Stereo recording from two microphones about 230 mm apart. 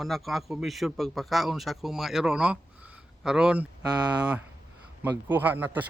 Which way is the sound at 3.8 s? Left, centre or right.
Centre.